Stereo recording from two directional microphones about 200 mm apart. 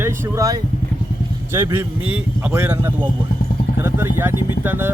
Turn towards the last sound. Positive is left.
turn(degrees=-10)  # may be behind; listen again after turning